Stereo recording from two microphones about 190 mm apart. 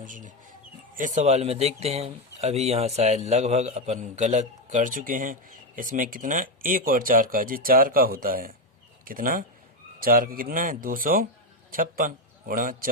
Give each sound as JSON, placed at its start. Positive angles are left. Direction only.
{"t": 0.0, "sound": "a man's voice", "side_deg": -45}